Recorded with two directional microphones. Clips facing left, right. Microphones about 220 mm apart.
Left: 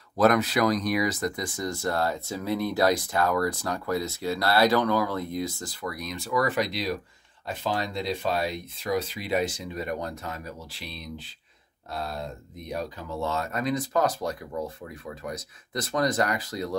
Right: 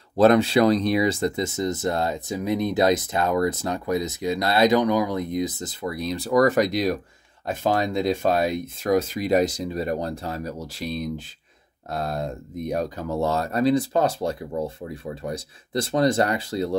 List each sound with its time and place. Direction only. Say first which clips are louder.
0.2 s speech: right 5 dB; 30° right (ahead or behind)